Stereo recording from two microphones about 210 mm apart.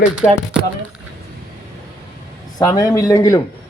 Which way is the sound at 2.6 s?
15° left (ahead or behind).